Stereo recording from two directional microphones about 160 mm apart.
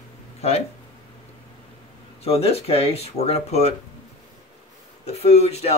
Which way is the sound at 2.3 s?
40° left (ahead or behind).